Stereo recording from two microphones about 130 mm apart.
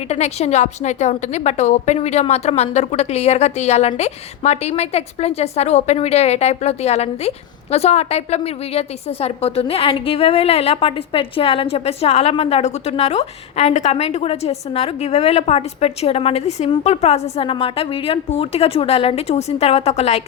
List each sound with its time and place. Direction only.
0.1 s a woman's voice: 55° left (ahead or behind)